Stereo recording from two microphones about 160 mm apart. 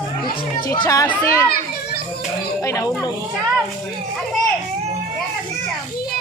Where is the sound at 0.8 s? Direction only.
25° left (ahead or behind).